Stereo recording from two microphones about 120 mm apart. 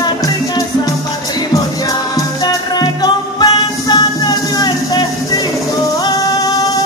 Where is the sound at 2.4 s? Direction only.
35° left (ahead or behind).